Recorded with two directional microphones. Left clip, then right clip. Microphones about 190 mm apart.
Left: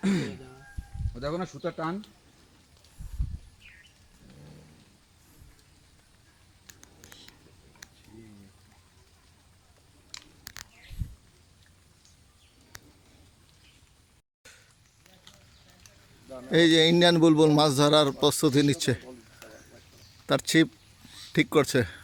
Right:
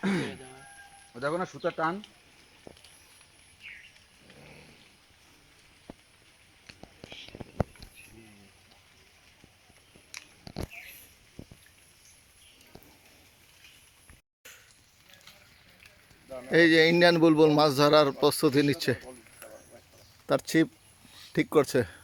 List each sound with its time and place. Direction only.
0.0 s a sound: 30° right (ahead or behind)
1.2 s speech: 15° right (ahead or behind)
16.3 s a man's voice: centre (ahead or behind)
20.2 s a man's voice: 5° right (ahead or behind)